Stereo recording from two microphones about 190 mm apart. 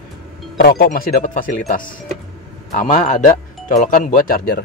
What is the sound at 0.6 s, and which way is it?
Speech, 55° left (ahead or behind).